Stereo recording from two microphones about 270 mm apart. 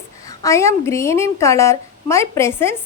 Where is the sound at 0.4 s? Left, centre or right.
Centre.